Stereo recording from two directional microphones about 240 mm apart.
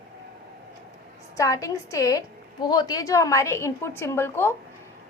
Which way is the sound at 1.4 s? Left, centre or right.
Centre.